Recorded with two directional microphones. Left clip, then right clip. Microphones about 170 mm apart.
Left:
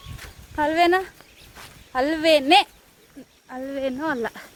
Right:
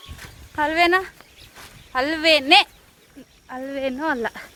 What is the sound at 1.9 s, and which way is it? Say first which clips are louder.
Speech: right 1 dB; 50° left (ahead or behind).